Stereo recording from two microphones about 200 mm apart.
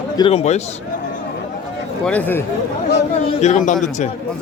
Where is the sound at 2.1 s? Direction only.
10° left (ahead or behind).